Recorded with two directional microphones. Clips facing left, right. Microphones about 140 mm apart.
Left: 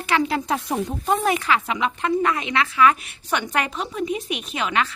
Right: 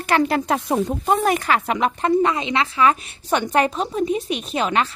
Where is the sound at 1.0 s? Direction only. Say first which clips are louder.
Right 1 dB; 45° right (ahead or behind).